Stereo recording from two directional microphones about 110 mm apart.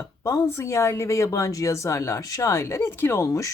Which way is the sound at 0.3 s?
25° left (ahead or behind).